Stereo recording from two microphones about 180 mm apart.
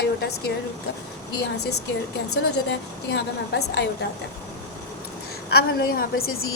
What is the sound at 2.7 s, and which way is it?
A woman's voice, 70° left (ahead or behind).